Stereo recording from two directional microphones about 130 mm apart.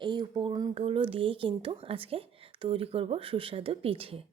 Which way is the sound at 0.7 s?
45° right (ahead or behind).